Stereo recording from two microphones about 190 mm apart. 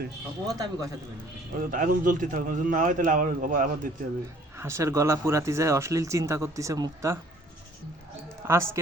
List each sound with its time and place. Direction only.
0.4 s a man's voice: 20° right (ahead or behind)
1.5 s a man's voice: 45° right (ahead or behind)
4.5 s speech: 15° right (ahead or behind)
8.4 s speech: 15° right (ahead or behind)